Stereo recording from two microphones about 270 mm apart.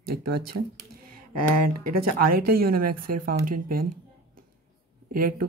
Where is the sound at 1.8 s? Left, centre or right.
Right.